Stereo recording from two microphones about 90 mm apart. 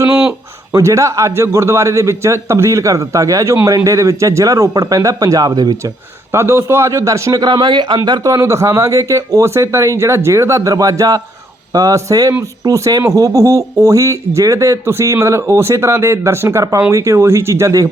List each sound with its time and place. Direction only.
0.1 s a sound: 5° right (ahead or behind)
0.7 s speech: 35° right (ahead or behind)
6.3 s speech: 30° right (ahead or behind)
7.4 s speech: 55° right (ahead or behind); by 17.8 s 35° right (ahead or behind)